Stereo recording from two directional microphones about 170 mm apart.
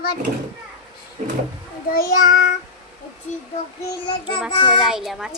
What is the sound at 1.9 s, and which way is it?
Child singing, 60° left (ahead or behind).